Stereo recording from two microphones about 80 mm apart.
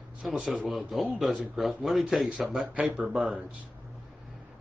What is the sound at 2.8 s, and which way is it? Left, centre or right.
Speech, centre.